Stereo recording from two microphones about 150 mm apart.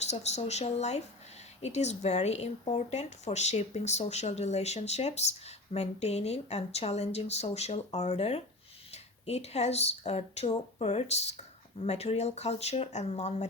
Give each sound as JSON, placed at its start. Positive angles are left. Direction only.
{"t": 0.0, "sound": "a woman's voice", "side_deg": 45}